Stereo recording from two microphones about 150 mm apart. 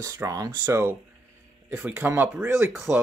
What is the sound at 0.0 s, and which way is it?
Speech, 25° right (ahead or behind).